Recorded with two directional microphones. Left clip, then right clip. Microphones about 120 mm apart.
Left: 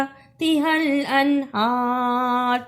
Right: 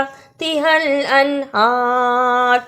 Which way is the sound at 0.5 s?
35° right (ahead or behind).